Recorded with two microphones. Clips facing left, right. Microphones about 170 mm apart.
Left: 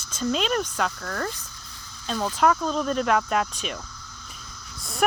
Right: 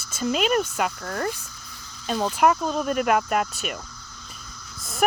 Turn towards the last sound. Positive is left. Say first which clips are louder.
# right 1 dB
turn(degrees=0)  # may be behind; listen again after turning